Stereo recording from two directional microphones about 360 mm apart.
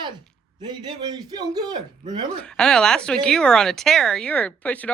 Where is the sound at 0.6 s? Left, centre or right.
Centre.